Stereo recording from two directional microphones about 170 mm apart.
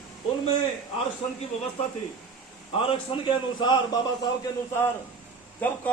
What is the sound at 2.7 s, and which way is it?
Speech, 30° left (ahead or behind).